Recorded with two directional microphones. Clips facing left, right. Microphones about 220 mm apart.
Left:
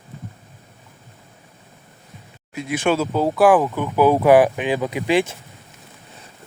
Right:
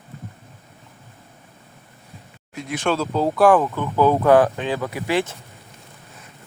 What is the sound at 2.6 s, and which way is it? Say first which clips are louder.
Speech: left 3 dB; 5° left (ahead or behind).